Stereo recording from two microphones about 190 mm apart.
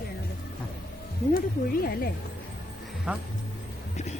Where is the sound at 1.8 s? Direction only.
55° left (ahead or behind).